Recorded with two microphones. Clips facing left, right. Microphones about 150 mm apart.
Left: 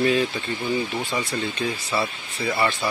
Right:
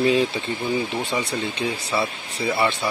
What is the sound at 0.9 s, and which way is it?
Speech, 20° right (ahead or behind).